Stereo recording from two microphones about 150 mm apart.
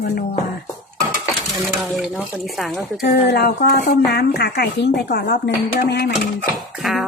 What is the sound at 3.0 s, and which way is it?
A woman's voice, 90° left.